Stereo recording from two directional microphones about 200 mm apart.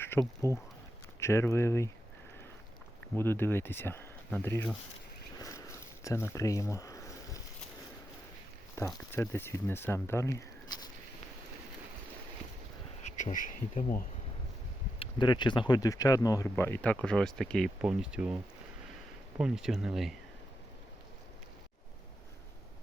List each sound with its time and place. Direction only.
0.2 s speech: 5° left (ahead or behind)
3.2 s speech: 10° left (ahead or behind)
5.4 s a sound: 15° left (ahead or behind)
8.8 s speech: 15° left (ahead or behind)
13.1 s speech: 35° left (ahead or behind)
14.9 s speech: 25° left (ahead or behind); by 18.3 s 5° right (ahead or behind)
19.4 s speech: 5° right (ahead or behind)